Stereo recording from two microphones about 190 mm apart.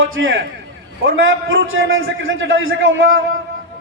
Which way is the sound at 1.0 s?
80° right.